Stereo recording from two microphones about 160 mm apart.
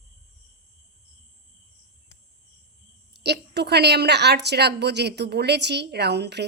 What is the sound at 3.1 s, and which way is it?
A woman's voice, 90° right.